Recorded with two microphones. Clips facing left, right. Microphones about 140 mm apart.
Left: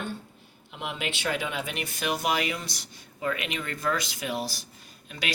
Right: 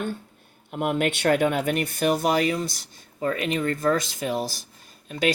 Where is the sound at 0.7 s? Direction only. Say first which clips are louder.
Right 10 dB; 50° right (ahead or behind).